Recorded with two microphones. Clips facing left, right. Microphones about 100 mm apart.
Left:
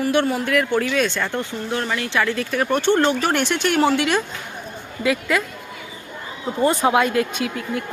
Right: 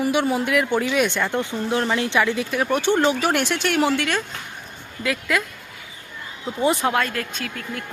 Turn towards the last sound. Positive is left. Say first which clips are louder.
# left 6 dB
turn(degrees=10)  # may be behind; listen again after turning